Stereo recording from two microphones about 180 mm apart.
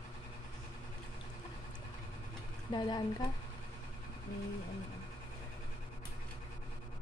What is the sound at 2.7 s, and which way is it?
Speech, 25° left (ahead or behind).